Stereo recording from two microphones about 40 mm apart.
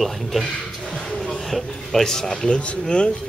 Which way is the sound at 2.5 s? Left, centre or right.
Left.